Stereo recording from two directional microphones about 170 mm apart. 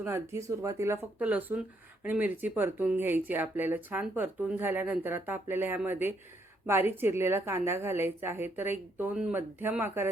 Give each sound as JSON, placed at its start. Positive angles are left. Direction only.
{"t": 0.0, "sound": "speech", "side_deg": -15}